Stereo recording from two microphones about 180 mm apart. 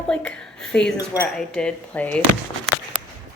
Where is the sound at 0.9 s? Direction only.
15° left (ahead or behind).